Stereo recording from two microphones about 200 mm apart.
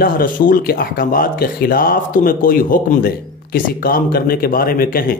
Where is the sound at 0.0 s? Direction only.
45° left (ahead or behind).